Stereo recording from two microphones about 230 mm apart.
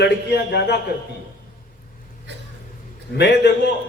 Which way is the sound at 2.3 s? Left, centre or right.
Right.